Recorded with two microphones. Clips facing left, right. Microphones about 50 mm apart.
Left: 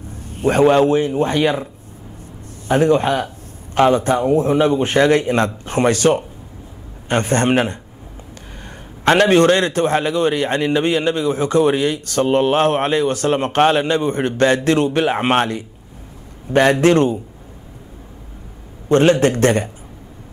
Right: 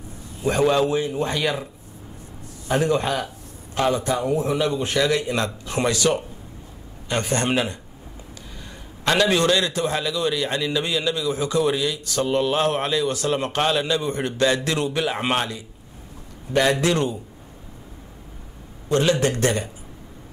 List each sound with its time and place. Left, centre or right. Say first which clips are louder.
0.2 s a man's voice: left 6 dB; left
2.7 s a man's voice: left 6 dB; left
18.9 s a man's voice: left 7 dB; left